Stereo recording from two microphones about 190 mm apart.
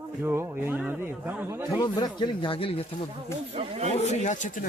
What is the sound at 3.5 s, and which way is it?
Speech, 35° right (ahead or behind).